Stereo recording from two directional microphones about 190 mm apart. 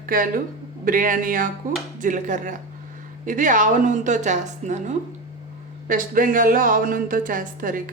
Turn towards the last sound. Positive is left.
turn(degrees=-45)  # may be behind; listen again after turning